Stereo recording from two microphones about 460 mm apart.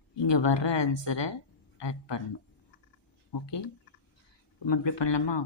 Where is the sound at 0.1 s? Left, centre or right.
Left.